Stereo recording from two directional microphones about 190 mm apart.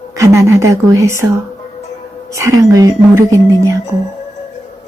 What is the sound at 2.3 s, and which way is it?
A woman's voice, 15° right (ahead or behind).